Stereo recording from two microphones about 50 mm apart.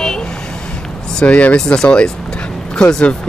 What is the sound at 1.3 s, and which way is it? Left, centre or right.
Speech, left.